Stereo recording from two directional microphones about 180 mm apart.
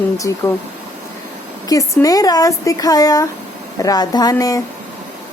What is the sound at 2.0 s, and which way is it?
A woman's voice, 20° left (ahead or behind).